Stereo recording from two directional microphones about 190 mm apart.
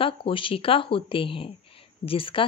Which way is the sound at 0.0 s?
30° left (ahead or behind).